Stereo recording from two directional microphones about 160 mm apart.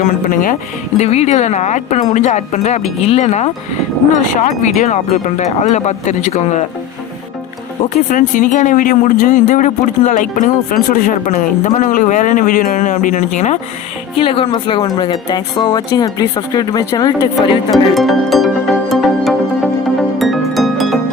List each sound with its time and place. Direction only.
0.0 s speech: 55° left (ahead or behind)
0.9 s speech: 45° left (ahead or behind)
8.1 s speech: 55° left (ahead or behind)
14.2 s speech: 35° left (ahead or behind)
17.7 s music: centre (ahead or behind)